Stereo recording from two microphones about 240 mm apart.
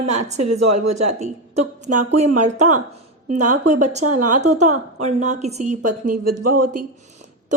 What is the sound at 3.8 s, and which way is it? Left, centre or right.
Speech, right.